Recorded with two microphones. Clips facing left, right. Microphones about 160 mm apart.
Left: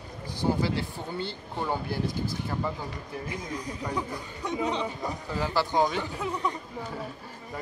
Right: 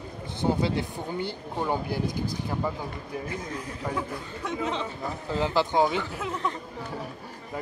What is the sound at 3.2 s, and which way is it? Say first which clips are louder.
Speech: right 1 dB; 15° left (ahead or behind).